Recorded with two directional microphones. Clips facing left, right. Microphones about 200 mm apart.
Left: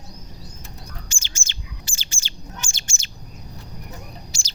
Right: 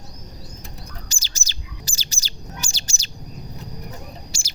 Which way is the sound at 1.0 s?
40° right (ahead or behind).